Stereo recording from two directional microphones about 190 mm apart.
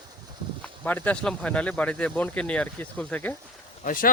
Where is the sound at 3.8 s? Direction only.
45° left (ahead or behind).